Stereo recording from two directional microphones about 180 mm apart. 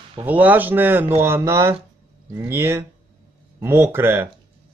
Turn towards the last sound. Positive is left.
turn(degrees=-10)  # may be behind; listen again after turning